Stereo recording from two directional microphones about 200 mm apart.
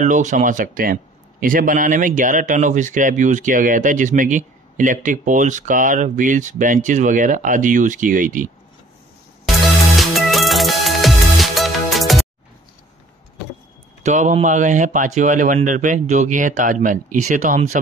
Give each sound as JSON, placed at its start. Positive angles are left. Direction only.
{"t": 0.0, "sound": "a man's voice", "side_deg": -40}
{"t": 9.9, "sound": "music", "side_deg": 0}
{"t": 14.0, "sound": "a man's voice", "side_deg": -35}